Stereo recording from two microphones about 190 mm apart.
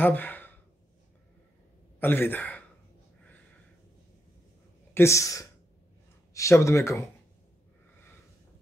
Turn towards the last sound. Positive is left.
turn(degrees=15)  # may be behind; listen again after turning